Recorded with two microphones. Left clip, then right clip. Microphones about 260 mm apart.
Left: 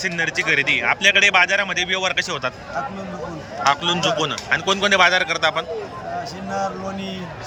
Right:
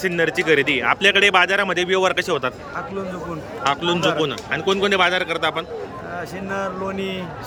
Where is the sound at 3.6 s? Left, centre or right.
Centre.